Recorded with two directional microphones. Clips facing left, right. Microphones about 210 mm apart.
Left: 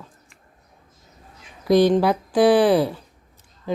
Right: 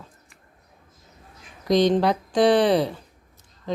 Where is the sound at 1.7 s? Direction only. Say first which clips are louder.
Left 3 dB; 5° left (ahead or behind).